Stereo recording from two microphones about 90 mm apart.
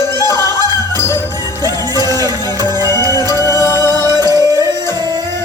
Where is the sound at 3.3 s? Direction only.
35° left (ahead or behind).